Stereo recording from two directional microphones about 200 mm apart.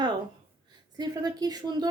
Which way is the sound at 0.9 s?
20° right (ahead or behind).